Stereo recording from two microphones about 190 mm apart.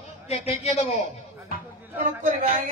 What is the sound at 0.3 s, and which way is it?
Speech, 35° left (ahead or behind).